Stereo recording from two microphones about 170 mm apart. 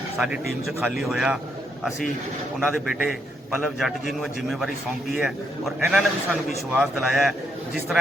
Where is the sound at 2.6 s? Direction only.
5° right (ahead or behind).